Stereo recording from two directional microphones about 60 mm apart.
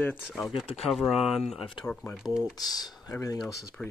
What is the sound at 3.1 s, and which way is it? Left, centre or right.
Speech, left.